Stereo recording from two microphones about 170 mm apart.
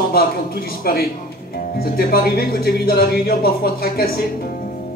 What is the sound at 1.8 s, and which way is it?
Speech, 60° left (ahead or behind).